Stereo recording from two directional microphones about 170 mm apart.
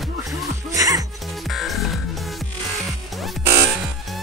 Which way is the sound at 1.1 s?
Centre (ahead or behind).